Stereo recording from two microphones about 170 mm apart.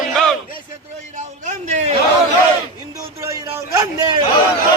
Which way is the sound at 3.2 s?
15° right (ahead or behind).